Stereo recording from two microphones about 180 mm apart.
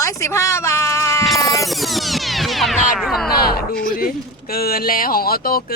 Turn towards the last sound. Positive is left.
turn(degrees=55)  # may be behind; listen again after turning